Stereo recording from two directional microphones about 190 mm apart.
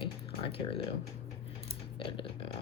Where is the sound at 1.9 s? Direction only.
25° left (ahead or behind).